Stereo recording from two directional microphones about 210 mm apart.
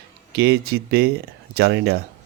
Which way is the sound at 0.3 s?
50° right (ahead or behind).